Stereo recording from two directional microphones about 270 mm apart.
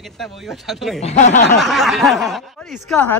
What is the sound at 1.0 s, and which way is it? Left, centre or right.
Speech, left.